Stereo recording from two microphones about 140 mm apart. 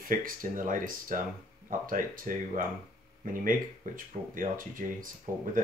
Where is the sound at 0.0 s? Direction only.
75° right (ahead or behind).